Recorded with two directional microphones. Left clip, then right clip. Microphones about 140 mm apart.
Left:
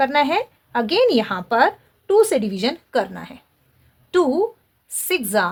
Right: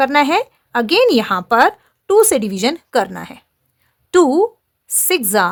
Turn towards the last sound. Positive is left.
turn(degrees=-60)  # may be behind; listen again after turning